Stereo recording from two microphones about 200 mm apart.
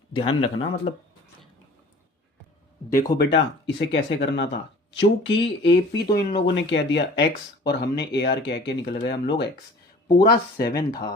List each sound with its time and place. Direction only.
0.2 s speech: 25° left (ahead or behind)
3.1 s speech: 20° left (ahead or behind)
3.8 s speech: 60° left (ahead or behind)
6.4 s speech: 65° left (ahead or behind); by 11.0 s 50° left (ahead or behind)